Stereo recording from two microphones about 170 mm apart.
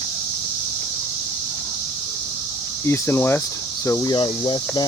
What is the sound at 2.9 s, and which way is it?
Speech, 15° left (ahead or behind).